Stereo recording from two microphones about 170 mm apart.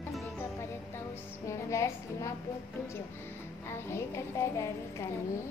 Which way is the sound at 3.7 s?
15° left (ahead or behind).